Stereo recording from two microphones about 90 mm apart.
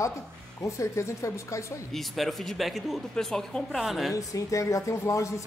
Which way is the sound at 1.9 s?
Centre (ahead or behind).